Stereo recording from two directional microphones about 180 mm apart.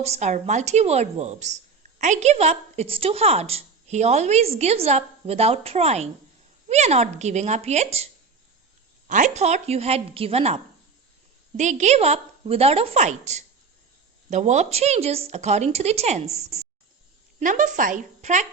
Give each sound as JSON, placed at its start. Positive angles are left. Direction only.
{"t": 0.0, "sound": "a woman's voice", "side_deg": -40}
{"t": 17.4, "sound": "a woman's voice", "side_deg": -45}